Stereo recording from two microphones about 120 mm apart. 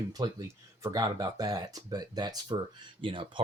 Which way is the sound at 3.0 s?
45° right (ahead or behind).